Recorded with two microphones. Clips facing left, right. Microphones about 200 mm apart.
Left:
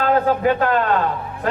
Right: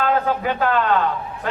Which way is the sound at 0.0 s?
40° left (ahead or behind).